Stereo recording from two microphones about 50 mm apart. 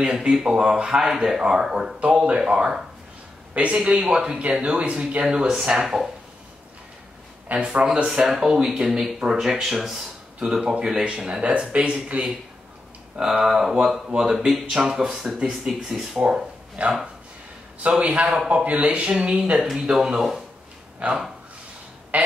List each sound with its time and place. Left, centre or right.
0.0 s speech: centre
2.2 s speech: centre
7.5 s speech: right
7.8 s speech: centre
10.6 s speech: centre
11.2 s speech: right
13.1 s speech: centre
14.9 s speech: centre
16.8 s speech: right
19.6 s speech: centre
21.0 s speech: right
22.1 s a sound: right